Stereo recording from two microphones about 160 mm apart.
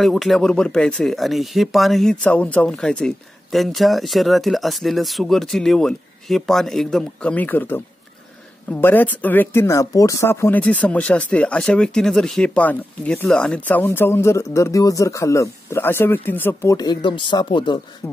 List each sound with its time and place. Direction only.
0.0 s speech: centre (ahead or behind)
16.7 s speech: 25° left (ahead or behind)
18.0 s speech: 20° left (ahead or behind)